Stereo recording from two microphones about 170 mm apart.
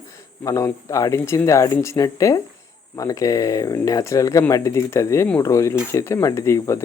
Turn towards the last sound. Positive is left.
turn(degrees=15)  # may be behind; listen again after turning